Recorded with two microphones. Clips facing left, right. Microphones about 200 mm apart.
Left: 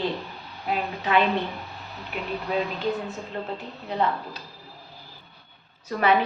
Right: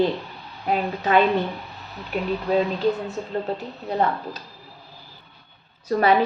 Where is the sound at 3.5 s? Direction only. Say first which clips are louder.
Right 4 dB; 40° right (ahead or behind).